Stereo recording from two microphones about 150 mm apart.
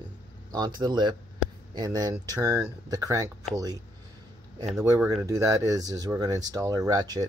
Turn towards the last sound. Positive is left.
turn(degrees=-25)  # may be behind; listen again after turning